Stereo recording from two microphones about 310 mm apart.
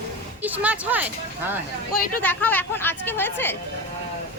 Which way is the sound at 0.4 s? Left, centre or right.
Centre.